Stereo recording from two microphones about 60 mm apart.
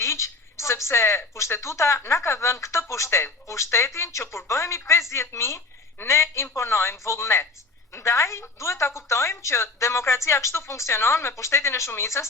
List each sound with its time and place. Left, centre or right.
0.0 s a woman's voice: left